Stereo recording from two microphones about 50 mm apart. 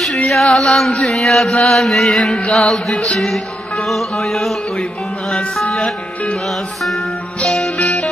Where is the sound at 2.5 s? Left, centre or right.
Centre.